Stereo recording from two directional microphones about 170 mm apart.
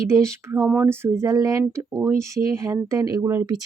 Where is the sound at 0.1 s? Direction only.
15° right (ahead or behind).